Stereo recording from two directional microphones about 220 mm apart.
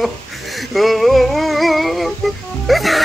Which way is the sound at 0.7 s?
Centre (ahead or behind).